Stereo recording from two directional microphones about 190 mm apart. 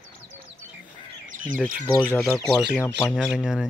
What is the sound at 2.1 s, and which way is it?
Speech, 10° left (ahead or behind).